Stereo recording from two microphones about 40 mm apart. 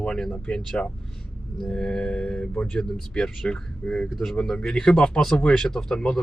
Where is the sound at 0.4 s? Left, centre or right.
Left.